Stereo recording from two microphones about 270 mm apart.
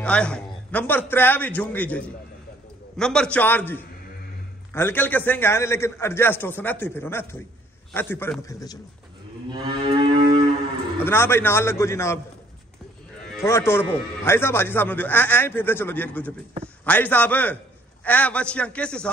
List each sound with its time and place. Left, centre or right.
0.0 s a man's voice: centre
9.5 s moo: centre
11.1 s a man's voice: centre
13.4 s a man's voice: centre